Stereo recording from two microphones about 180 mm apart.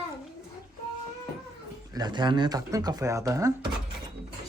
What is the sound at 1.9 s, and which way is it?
Speech, 25° right (ahead or behind).